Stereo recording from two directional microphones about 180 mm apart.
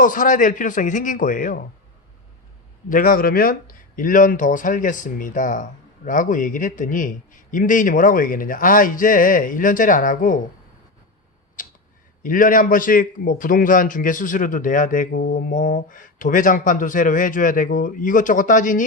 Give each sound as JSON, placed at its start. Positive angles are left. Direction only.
{"t": 0.0, "sound": "speech", "side_deg": 45}
{"t": 2.9, "sound": "speech", "side_deg": 50}
{"t": 11.6, "sound": "a sound", "side_deg": 50}
{"t": 12.2, "sound": "speech", "side_deg": 50}